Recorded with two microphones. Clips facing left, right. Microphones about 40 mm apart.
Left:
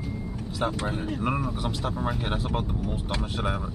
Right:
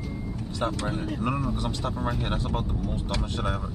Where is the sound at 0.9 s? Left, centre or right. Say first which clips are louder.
Even; centre.